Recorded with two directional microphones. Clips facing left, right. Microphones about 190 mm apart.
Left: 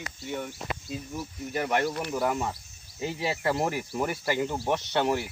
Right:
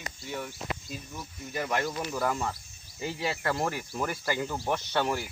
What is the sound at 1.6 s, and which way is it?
Speech, 10° left (ahead or behind).